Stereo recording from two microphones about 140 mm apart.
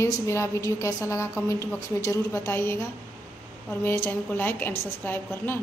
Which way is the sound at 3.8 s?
15° left (ahead or behind).